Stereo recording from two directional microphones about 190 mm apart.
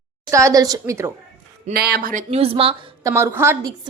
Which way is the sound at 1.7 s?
55° right (ahead or behind).